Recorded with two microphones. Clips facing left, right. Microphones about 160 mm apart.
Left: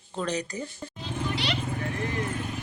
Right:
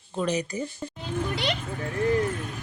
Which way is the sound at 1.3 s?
50° right (ahead or behind).